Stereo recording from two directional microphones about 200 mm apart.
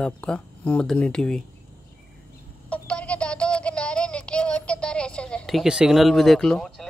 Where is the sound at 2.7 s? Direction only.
5° left (ahead or behind).